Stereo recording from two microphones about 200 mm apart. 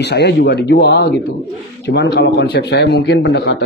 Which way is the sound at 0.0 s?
55° left (ahead or behind).